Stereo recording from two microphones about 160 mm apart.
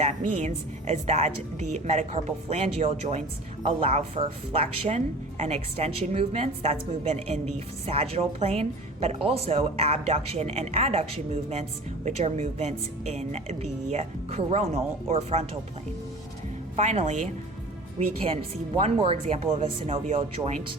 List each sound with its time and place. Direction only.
0.1 s a woman's voice: 45° right (ahead or behind)
12.0 s a woman's voice: 45° right (ahead or behind)
16.7 s a woman's voice: 45° right (ahead or behind)
18.9 s a woman's voice: 35° right (ahead or behind)